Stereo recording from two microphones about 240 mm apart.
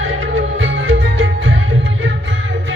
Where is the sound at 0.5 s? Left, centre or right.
Right.